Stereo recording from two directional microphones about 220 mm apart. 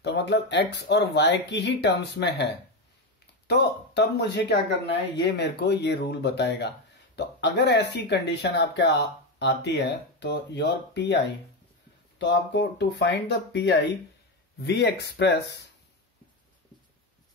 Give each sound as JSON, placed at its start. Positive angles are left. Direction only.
{"t": 0.0, "sound": "speech", "side_deg": 50}
{"t": 3.4, "sound": "speech", "side_deg": 50}